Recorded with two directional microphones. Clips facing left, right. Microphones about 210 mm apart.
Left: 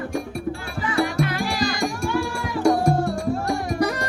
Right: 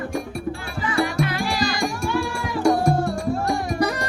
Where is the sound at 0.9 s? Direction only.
50° left (ahead or behind).